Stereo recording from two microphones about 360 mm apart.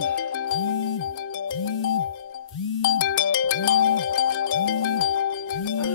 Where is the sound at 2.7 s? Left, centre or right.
Left.